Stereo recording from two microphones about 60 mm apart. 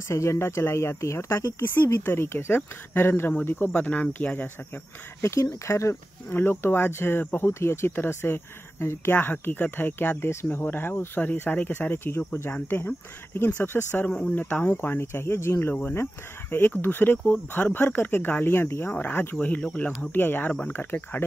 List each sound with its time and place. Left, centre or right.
0.1 s speech: left
1.6 s speech: left
3.7 s speech: left
5.2 s speech: left
6.3 s speech: left
13.5 s speech: left
20.0 s speech: left